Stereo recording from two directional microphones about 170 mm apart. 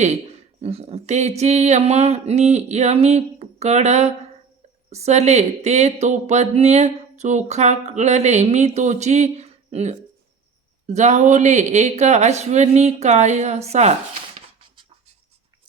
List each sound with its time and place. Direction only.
0.0 s speech: 40° right (ahead or behind)